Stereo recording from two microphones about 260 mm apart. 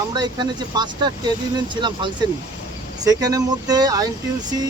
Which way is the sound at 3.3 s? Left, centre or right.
Centre.